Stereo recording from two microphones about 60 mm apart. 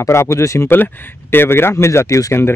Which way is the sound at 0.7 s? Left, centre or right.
Left.